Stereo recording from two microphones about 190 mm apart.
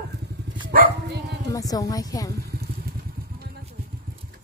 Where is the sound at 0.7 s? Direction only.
55° right (ahead or behind).